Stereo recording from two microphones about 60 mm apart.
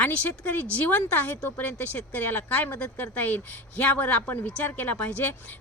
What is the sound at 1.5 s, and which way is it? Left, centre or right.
Speech, left.